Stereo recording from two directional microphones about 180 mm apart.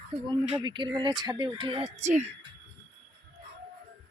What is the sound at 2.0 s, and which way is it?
Speech, 40° right (ahead or behind).